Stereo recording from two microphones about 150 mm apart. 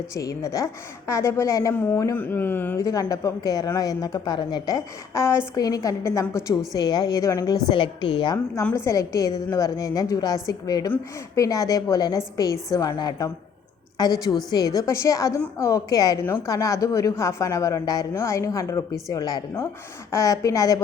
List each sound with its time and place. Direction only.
0.1 s speech: 20° left (ahead or behind)
7.7 s a woman's voice: 35° left (ahead or behind)
8.6 s speech: 15° left (ahead or behind)